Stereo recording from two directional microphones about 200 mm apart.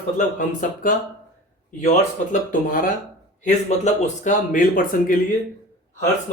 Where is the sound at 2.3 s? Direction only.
40° left (ahead or behind).